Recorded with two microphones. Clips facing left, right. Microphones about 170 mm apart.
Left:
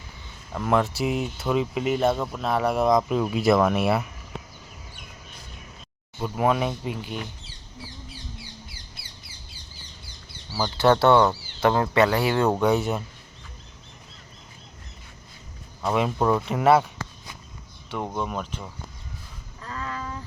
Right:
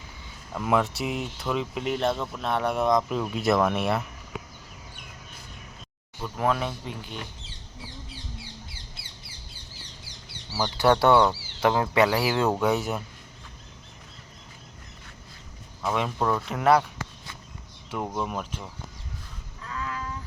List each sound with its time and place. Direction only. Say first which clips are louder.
0.5 s speech: left 2 dB; centre (ahead or behind)
6.3 s speech: left 3 dB; 10° left (ahead or behind)
10.6 s speech: left 2 dB; 15° right (ahead or behind)
15.9 s speech: left 4 dB; 10° left (ahead or behind)
17.9 s speech: left 1 dB; 5° right (ahead or behind)
19.6 s a sound: left 1 dB; 35° left (ahead or behind)